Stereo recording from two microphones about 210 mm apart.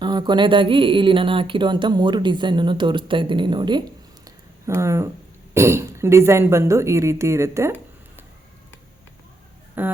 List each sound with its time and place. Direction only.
0.0 s speech: 20° right (ahead or behind)
9.8 s speech: 10° right (ahead or behind)